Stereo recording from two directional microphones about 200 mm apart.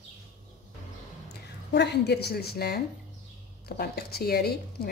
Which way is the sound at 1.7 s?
60° left (ahead or behind).